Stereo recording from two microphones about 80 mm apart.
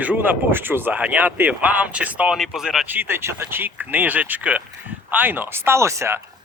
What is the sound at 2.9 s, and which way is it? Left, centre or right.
Speech, right.